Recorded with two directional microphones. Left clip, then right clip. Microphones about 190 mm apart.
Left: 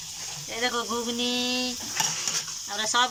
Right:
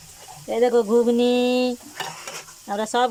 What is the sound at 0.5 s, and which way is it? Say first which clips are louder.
Speech: right 11 dB; 40° right (ahead or behind).